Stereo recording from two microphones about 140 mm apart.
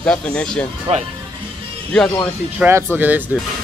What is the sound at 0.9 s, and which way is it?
Speech, 45° right (ahead or behind).